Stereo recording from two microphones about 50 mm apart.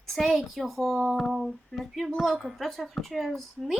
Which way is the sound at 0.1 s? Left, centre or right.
Centre.